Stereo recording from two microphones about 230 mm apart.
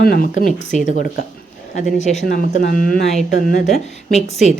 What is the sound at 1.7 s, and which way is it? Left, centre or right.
A woman's voice, left.